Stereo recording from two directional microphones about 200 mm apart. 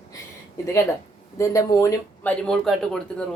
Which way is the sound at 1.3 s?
15° left (ahead or behind).